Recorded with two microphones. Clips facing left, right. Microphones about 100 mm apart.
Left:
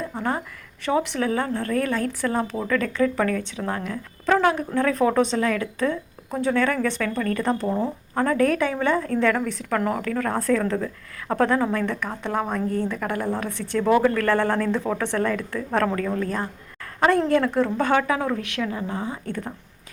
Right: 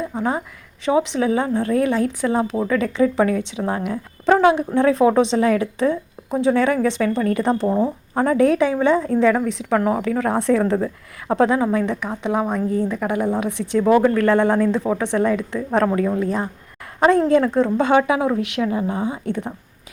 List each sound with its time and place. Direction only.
0.0 s a woman's voice: 10° right (ahead or behind); by 11.3 s 30° right (ahead or behind)
11.3 s speech: 10° right (ahead or behind)